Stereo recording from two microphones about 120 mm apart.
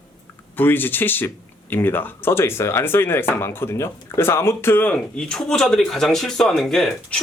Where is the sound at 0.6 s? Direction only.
15° left (ahead or behind).